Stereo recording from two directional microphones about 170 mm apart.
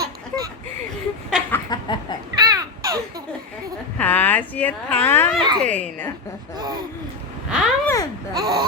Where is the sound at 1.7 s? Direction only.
25° left (ahead or behind).